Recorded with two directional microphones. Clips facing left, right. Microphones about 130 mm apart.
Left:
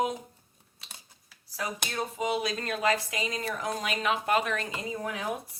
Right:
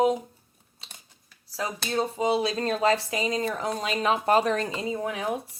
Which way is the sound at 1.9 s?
30° right (ahead or behind).